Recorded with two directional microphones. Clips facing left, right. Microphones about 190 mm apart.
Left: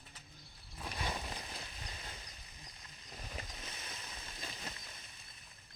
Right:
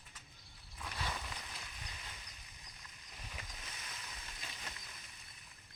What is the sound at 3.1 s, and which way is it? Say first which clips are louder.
Vehicle: left 5 dB; 35° left (ahead or behind).